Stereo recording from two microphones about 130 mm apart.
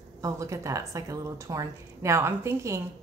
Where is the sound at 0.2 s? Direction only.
25° right (ahead or behind).